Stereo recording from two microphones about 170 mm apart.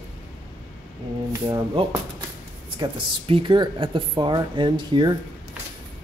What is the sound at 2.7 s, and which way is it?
Speech, 30° right (ahead or behind).